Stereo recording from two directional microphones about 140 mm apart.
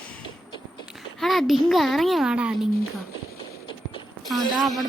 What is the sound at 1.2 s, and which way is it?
A child's voice, centre (ahead or behind).